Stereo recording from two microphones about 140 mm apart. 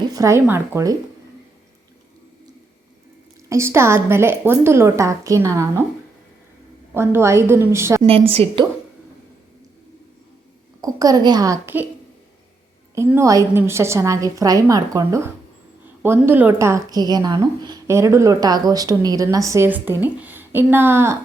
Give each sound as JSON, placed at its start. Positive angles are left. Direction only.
{"t": 0.0, "sound": "speech", "side_deg": -25}
{"t": 3.5, "sound": "a woman's voice", "side_deg": -20}
{"t": 6.9, "sound": "a woman's voice", "side_deg": -20}
{"t": 8.0, "sound": "a woman's voice", "side_deg": -45}
{"t": 10.8, "sound": "a woman's voice", "side_deg": -25}
{"t": 12.9, "sound": "a woman's voice", "side_deg": -20}